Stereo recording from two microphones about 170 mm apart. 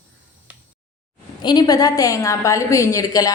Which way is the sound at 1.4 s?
25° left (ahead or behind).